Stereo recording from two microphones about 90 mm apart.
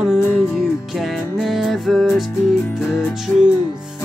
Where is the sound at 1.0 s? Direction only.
Centre (ahead or behind).